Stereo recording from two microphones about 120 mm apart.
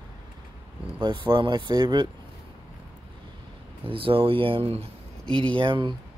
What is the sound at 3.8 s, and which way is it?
Speech, 50° right (ahead or behind).